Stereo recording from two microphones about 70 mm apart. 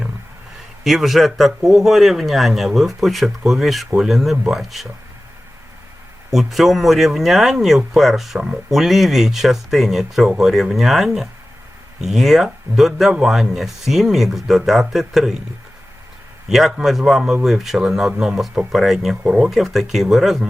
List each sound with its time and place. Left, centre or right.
0.9 s speech: centre
6.3 s speech: centre
16.5 s speech: centre
19.2 s speech: centre
19.5 s speech: centre